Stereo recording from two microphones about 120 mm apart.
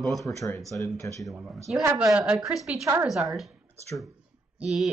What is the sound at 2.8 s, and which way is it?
Speech, 25° right (ahead or behind).